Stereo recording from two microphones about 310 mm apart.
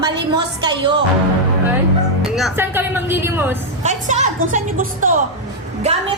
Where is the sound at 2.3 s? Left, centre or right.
Centre.